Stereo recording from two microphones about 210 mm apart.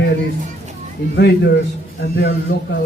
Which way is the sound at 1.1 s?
50° left (ahead or behind).